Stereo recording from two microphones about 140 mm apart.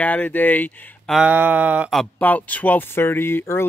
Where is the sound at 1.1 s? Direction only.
10° right (ahead or behind).